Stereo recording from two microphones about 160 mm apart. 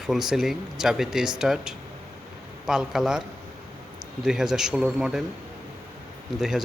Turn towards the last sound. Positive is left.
turn(degrees=-5)  # may be behind; listen again after turning